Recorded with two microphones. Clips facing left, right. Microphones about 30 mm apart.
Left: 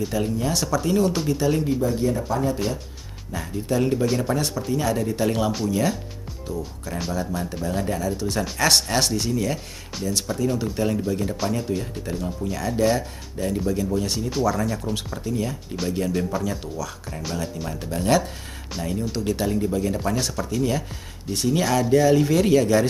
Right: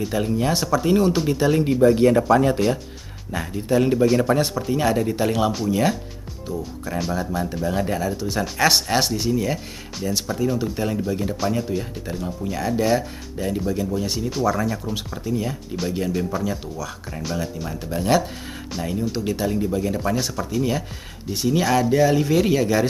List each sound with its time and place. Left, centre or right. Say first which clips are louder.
0.4 s speech: right 3 dB; right
1.4 s speech: right 3 dB; right
2.0 s speech: right 8 dB; right
3.3 s speech: right 3 dB; centre
5.1 s speech: right 2 dB; centre